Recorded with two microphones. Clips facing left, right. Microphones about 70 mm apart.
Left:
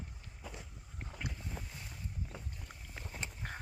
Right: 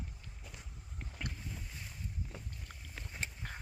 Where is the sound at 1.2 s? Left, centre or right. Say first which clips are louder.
Even; centre.